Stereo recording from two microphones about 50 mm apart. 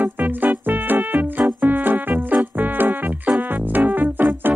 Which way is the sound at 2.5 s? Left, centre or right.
Right.